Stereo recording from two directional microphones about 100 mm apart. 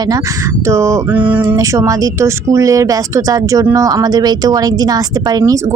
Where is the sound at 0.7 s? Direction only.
30° right (ahead or behind).